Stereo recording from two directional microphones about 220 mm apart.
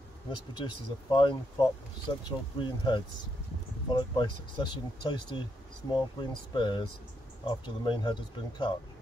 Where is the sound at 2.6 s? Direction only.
20° left (ahead or behind).